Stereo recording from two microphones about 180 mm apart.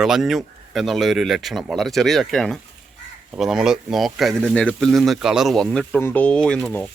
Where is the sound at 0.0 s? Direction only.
Centre (ahead or behind).